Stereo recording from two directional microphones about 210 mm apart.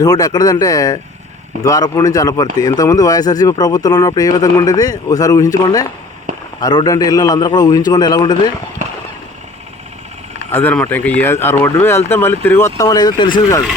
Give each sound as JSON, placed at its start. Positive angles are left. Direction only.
{"t": 0.0, "sound": "a man's voice", "side_deg": 20}
{"t": 10.5, "sound": "speech", "side_deg": 10}